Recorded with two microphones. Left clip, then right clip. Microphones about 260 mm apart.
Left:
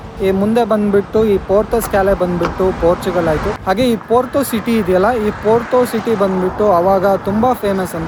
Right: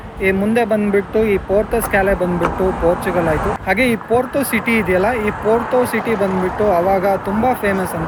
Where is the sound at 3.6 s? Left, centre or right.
Centre.